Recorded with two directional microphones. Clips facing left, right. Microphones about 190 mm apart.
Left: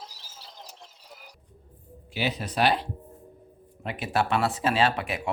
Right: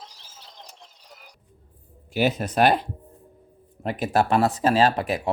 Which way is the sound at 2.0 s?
45° right (ahead or behind).